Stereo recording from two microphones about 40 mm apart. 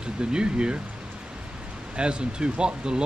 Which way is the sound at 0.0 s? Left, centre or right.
Right.